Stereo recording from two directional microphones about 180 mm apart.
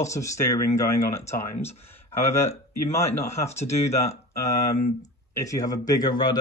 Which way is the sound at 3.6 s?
40° left (ahead or behind).